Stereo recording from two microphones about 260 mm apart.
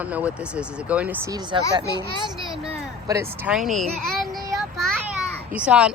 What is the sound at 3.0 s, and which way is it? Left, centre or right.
A child's voice, centre.